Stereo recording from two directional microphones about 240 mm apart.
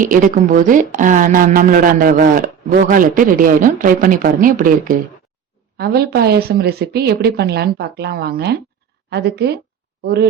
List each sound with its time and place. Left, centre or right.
0.0 s a woman's voice: right